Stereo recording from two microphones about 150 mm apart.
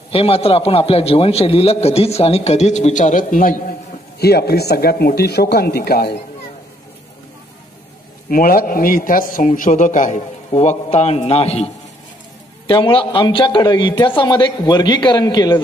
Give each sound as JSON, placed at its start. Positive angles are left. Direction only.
{"t": 0.1, "sound": "a man's voice", "side_deg": 40}
{"t": 4.2, "sound": "speech", "side_deg": 90}
{"t": 8.3, "sound": "a man's voice", "side_deg": 75}